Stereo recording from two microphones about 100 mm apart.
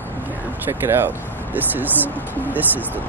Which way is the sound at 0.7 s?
20° right (ahead or behind).